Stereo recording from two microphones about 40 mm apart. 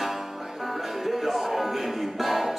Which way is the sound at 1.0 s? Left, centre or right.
Centre.